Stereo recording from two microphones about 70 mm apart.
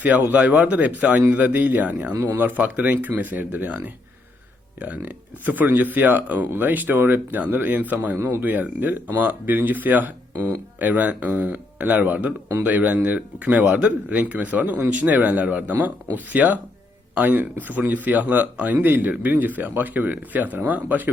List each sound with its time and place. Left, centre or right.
0.0 s a man's voice: right